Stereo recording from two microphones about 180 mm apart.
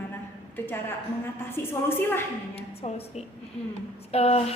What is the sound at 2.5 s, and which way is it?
A woman's voice, 35° left (ahead or behind).